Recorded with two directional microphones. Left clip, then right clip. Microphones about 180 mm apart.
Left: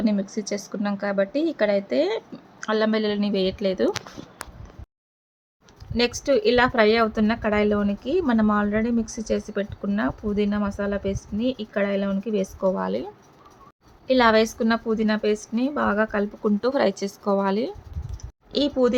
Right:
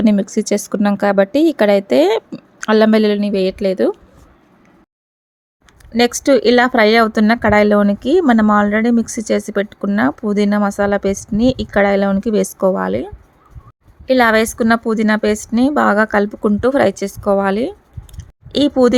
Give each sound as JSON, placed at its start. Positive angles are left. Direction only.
{"t": 0.0, "sound": "speech", "side_deg": -40}
{"t": 5.9, "sound": "speech", "side_deg": -50}
{"t": 14.1, "sound": "speech", "side_deg": -40}
{"t": 16.6, "sound": "speech", "side_deg": -35}
{"t": 18.5, "sound": "speech", "side_deg": -50}